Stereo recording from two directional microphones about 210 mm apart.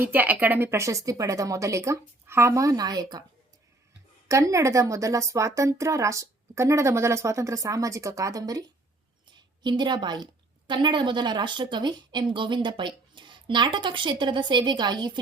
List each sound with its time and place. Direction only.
0.0 s speech: 10° right (ahead or behind)
4.3 s a woman's voice: 15° right (ahead or behind)